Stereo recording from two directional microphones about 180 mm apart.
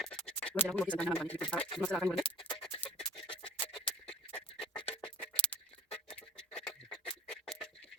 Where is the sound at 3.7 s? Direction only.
5° left (ahead or behind).